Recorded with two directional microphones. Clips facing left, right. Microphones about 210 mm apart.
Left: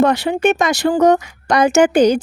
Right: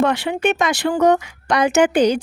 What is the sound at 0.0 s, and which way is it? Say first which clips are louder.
Speech: left 4 dB; 40° left (ahead or behind).